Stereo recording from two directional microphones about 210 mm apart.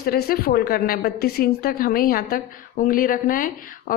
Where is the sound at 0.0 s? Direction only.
45° left (ahead or behind).